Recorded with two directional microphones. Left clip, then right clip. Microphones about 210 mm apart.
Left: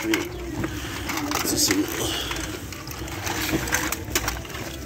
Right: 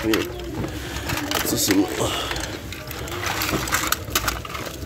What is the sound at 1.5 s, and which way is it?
Speech, 30° right (ahead or behind).